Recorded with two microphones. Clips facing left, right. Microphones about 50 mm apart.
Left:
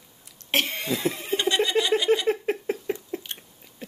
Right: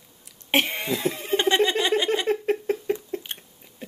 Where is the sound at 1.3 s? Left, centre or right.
Right.